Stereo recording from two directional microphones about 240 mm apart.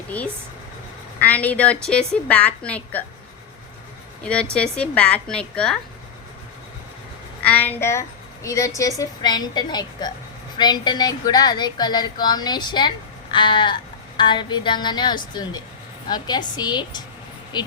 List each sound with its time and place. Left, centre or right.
1.2 s a woman's voice: centre
4.2 s a woman's voice: centre
7.4 s a woman's voice: centre